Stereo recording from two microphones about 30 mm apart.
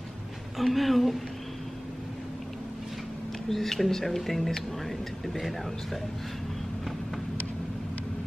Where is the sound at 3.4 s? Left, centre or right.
Centre.